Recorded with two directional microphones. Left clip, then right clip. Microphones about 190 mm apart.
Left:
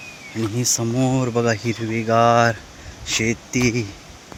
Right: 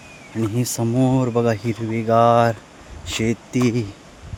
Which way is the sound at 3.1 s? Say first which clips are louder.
Left 2 dB; 20° right (ahead or behind).